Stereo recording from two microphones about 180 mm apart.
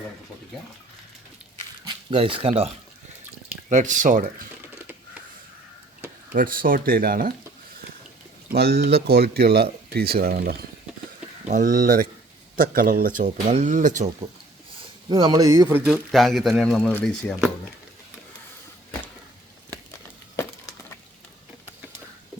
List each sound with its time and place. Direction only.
1.8 s speech: 30° right (ahead or behind)
3.7 s speech: 45° right (ahead or behind)
6.3 s speech: 50° right (ahead or behind)
8.4 s speech: 60° right (ahead or behind)
11.4 s speech: 45° right (ahead or behind)
15.1 s speech: 25° right (ahead or behind)
15.9 s speech: centre (ahead or behind)